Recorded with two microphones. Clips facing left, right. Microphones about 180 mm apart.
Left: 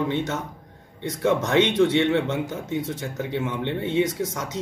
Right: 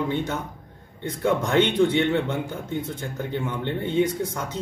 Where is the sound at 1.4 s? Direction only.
Centre (ahead or behind).